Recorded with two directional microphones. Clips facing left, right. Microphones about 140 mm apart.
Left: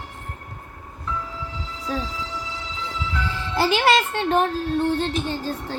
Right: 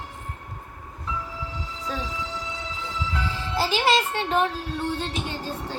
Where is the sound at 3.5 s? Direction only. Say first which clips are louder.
Left 3 dB; 60° left (ahead or behind).